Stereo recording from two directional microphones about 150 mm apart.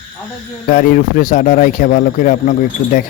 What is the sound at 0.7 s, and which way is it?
Speech, 70° left (ahead or behind).